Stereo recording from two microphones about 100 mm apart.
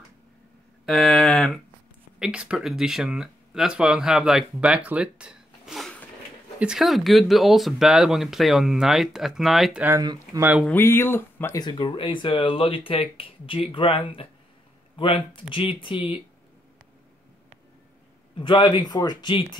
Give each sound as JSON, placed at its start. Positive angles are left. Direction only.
{"t": 0.8, "sound": "a sound", "side_deg": 0}
{"t": 2.1, "sound": "speech", "side_deg": -5}
{"t": 10.7, "sound": "speech", "side_deg": 25}
{"t": 11.8, "sound": "speech", "side_deg": 55}
{"t": 18.4, "sound": "speech", "side_deg": 50}